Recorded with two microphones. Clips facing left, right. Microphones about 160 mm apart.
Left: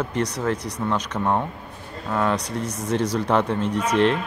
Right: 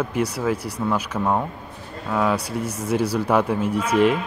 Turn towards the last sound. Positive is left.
turn(degrees=-10)  # may be behind; listen again after turning